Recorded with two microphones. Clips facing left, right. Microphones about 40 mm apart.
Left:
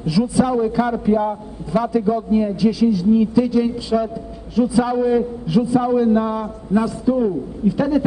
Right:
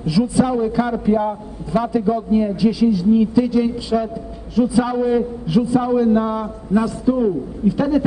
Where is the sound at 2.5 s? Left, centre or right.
Centre.